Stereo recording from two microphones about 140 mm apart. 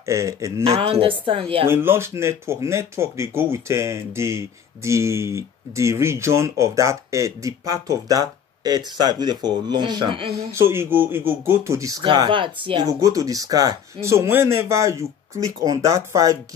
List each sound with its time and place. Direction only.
0.0 s speech: 20° right (ahead or behind)
0.7 s a woman's voice: 45° right (ahead or behind)
1.7 s speech: 15° right (ahead or behind); by 10.3 s 35° right (ahead or behind)
10.5 s speech: 15° right (ahead or behind)
12.0 s a woman's voice: 35° right (ahead or behind)
12.8 s speech: 25° right (ahead or behind)